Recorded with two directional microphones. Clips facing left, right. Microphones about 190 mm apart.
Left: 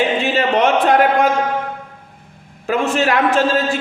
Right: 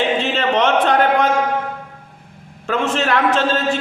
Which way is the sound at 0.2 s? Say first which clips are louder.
Left 2 dB; 10° left (ahead or behind).